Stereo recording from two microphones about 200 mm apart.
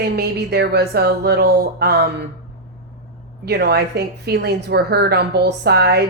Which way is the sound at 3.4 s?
55° right (ahead or behind).